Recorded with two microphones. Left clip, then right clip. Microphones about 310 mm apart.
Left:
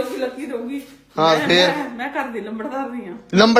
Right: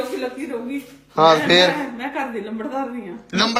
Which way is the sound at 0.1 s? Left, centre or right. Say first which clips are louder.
Left 1 dB; centre.